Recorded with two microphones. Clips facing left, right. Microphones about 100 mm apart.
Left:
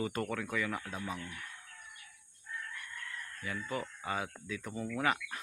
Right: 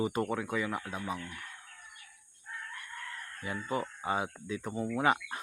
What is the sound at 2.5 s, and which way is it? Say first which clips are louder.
Chicken: even; 50° right (ahead or behind).